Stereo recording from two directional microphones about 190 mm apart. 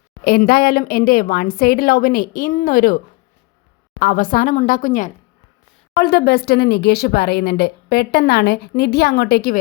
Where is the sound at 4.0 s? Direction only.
45° left (ahead or behind).